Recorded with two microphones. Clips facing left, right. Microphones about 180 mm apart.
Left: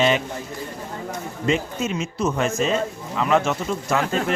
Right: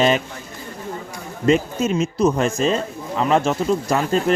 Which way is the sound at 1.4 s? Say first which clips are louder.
Right 6 dB; 40° right (ahead or behind).